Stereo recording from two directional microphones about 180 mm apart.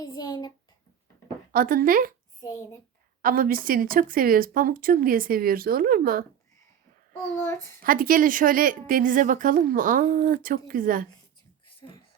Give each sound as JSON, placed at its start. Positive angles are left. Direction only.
{"t": 0.0, "sound": "a sound", "side_deg": 20}
{"t": 1.5, "sound": "a woman's voice", "side_deg": -50}
{"t": 3.2, "sound": "a woman's voice", "side_deg": -50}
{"t": 7.3, "sound": "a child's voice", "side_deg": 15}
{"t": 7.8, "sound": "a woman's voice", "side_deg": -50}
{"t": 11.8, "sound": "speech", "side_deg": 25}